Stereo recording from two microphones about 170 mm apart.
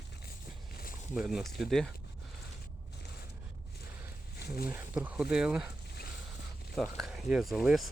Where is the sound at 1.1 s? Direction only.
5° right (ahead or behind).